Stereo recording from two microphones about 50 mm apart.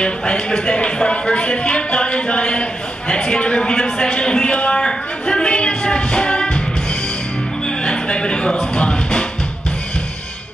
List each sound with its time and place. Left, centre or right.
0.0 s speech: centre
7.6 s music: centre